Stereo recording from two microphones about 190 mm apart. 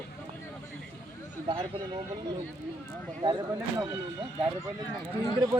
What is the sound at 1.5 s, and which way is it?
Speech, 25° right (ahead or behind).